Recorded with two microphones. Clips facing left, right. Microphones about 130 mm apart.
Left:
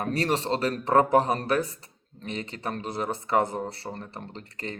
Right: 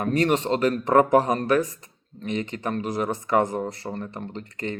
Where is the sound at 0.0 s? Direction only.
35° left (ahead or behind).